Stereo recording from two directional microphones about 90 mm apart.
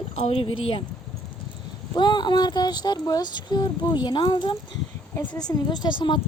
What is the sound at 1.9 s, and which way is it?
Speech, 55° left (ahead or behind).